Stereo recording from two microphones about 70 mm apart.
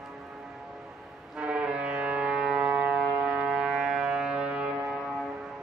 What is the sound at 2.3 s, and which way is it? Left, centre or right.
Civil defense siren, centre.